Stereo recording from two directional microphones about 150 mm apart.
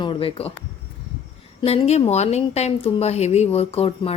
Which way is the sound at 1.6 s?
45° left (ahead or behind).